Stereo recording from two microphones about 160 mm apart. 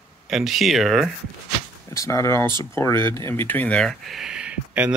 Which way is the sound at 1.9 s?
20° left (ahead or behind).